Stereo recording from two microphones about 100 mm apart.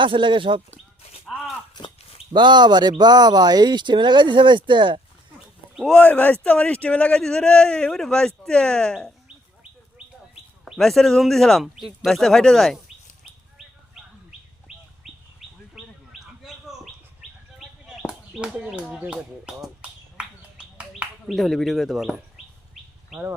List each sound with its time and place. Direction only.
0.0 s speech: 55° right (ahead or behind)
2.3 s speech: 50° right (ahead or behind)
5.7 s speech: centre (ahead or behind)
6.0 s a man's voice: 15° left (ahead or behind)
10.7 s speech: centre (ahead or behind)
14.7 s bird: 5° right (ahead or behind)
17.8 s a sound: 10° right (ahead or behind)
18.9 s speech: 5° right (ahead or behind)
20.1 s a sound: 10° right (ahead or behind)
21.2 s speech: centre (ahead or behind)
22.7 s bird: centre (ahead or behind)